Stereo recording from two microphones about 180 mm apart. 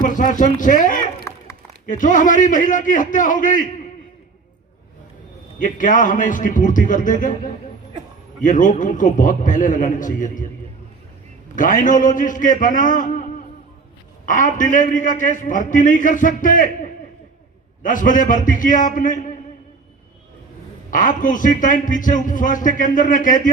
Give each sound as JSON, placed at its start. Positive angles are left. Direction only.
{"t": 0.0, "sound": "a man's voice", "side_deg": 45}
{"t": 1.3, "sound": "a sound", "side_deg": 15}
{"t": 1.9, "sound": "a man's voice", "side_deg": 45}
{"t": 5.6, "sound": "a man's voice", "side_deg": 45}
{"t": 11.5, "sound": "a man's voice", "side_deg": 45}
{"t": 14.3, "sound": "a man's voice", "side_deg": 45}
{"t": 17.8, "sound": "a man's voice", "side_deg": 45}
{"t": 20.9, "sound": "a man's voice", "side_deg": 45}